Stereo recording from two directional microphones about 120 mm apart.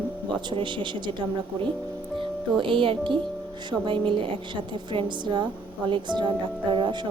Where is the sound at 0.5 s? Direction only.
40° right (ahead or behind).